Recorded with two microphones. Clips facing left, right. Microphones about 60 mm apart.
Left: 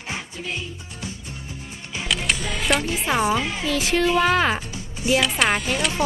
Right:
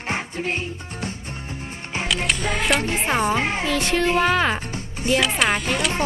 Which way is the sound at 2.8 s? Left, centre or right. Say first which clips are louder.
Right 2 dB; right.